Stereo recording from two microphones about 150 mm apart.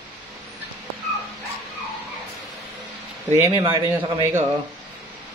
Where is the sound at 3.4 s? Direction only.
20° right (ahead or behind).